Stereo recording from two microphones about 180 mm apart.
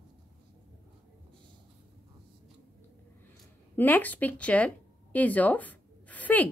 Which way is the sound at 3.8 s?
10° left (ahead or behind).